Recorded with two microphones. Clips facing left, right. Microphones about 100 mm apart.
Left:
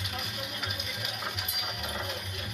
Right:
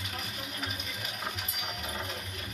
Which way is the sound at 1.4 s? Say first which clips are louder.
Left 1 dB; 35° right (ahead or behind).